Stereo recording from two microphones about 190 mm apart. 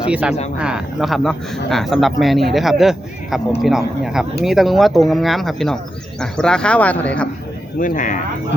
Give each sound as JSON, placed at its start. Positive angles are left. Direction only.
{"t": 0.1, "sound": "speech", "side_deg": -5}
{"t": 7.8, "sound": "speech", "side_deg": 45}